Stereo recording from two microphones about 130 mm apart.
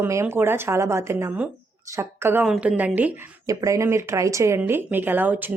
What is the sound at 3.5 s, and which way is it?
Speech, 25° right (ahead or behind).